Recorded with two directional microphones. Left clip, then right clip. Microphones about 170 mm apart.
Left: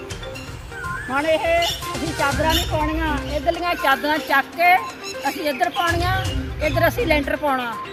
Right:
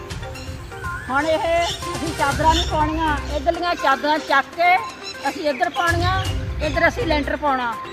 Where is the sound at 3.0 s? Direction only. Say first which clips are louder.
Right 1 dB; 15° left (ahead or behind); by 5.7 s centre (ahead or behind).